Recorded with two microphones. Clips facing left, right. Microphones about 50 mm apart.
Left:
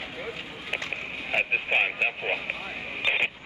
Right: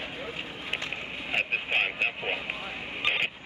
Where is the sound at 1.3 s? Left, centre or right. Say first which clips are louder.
Left 3 dB; centre.